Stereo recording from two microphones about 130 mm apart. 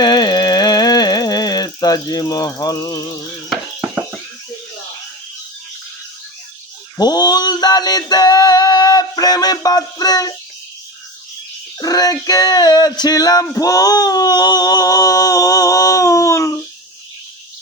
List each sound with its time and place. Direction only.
0.0 s music: 30° left (ahead or behind)
6.9 s male singing: 30° left (ahead or behind)
11.8 s a sound: 30° left (ahead or behind)